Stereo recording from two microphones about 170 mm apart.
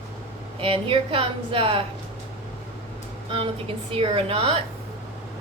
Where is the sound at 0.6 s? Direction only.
30° right (ahead or behind).